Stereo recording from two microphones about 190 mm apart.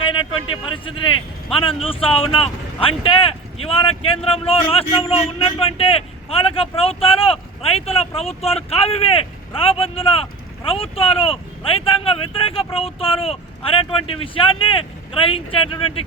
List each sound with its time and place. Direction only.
0.0 s vehicle: 25° left (ahead or behind)
1.5 s speech: 30° left (ahead or behind)